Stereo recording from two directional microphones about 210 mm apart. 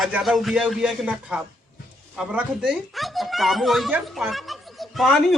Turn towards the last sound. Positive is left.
turn(degrees=0)  # may be behind; listen again after turning